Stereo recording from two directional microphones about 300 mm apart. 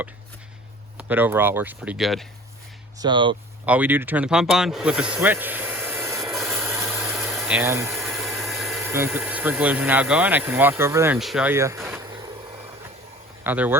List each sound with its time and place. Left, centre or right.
0.9 s speech: centre
3.0 s speech: centre
13.4 s speech: centre